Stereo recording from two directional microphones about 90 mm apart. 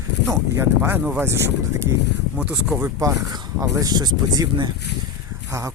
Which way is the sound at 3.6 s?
40° right (ahead or behind).